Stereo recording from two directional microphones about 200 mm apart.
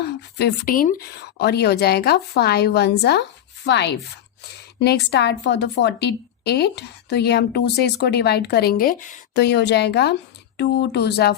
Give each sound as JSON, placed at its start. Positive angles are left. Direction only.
{"t": 0.0, "sound": "speech", "side_deg": 55}
{"t": 5.1, "sound": "speech", "side_deg": 60}
{"t": 9.3, "sound": "speech", "side_deg": 55}